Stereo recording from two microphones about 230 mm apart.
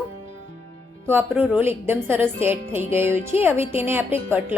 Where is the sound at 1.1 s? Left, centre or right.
Centre.